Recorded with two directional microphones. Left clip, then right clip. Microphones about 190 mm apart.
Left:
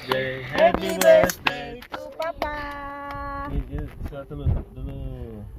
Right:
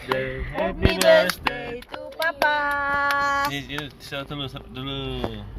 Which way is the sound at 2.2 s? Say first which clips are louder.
Right 8 dB; 40° right (ahead or behind).